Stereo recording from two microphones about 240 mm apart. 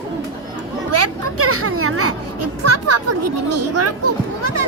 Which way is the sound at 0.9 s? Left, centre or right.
Right.